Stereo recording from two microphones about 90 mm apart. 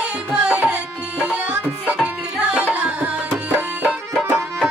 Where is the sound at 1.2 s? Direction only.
15° right (ahead or behind).